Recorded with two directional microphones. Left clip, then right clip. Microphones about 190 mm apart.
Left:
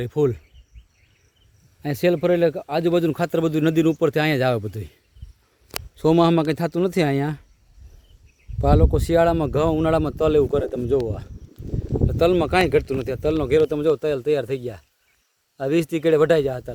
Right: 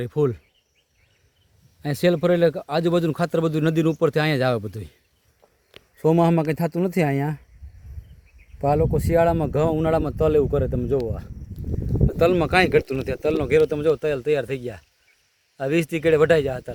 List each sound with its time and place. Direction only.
0.0 s speech: 5° left (ahead or behind)
1.8 s speech: centre (ahead or behind)
6.0 s speech: centre (ahead or behind)
8.6 s speech: 5° left (ahead or behind)
12.1 s speech: 5° left (ahead or behind)